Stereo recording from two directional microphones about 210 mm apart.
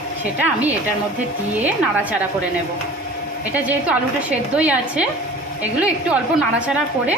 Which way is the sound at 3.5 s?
5° right (ahead or behind).